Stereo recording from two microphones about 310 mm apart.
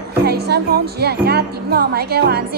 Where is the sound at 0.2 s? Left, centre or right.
Right.